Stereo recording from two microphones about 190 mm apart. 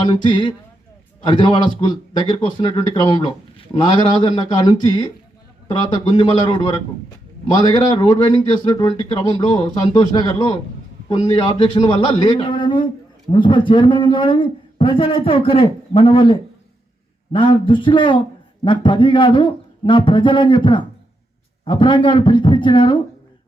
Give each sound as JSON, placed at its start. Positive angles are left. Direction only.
{"t": 0.1, "sound": "a man's voice", "side_deg": 25}